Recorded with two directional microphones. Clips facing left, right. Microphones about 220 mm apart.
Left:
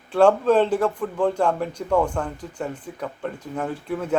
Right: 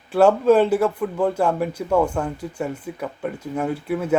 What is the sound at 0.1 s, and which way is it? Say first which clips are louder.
Speech: right 2 dB; 5° right (ahead or behind).